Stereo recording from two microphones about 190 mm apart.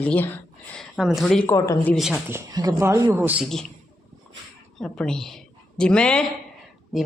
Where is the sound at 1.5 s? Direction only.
15° left (ahead or behind).